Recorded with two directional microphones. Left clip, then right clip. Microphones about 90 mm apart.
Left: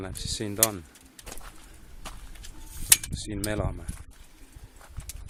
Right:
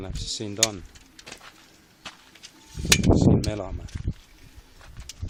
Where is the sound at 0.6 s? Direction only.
Centre (ahead or behind).